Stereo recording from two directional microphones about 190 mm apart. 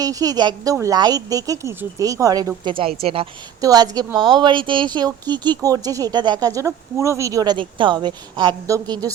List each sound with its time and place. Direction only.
0.0 s speech: 20° right (ahead or behind)
2.6 s speech: 30° right (ahead or behind)
3.6 s speech: 20° right (ahead or behind)